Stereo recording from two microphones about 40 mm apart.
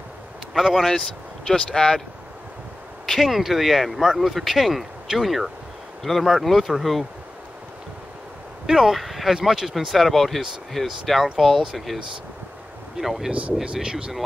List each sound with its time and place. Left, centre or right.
0.6 s speech: centre
1.5 s speech: centre
3.2 s speech: centre
8.6 s speech: centre
9.0 s a sound: centre
9.3 s speech: centre
13.7 s speech: centre